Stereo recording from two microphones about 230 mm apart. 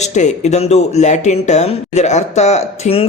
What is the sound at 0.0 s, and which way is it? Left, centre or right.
Speech, left.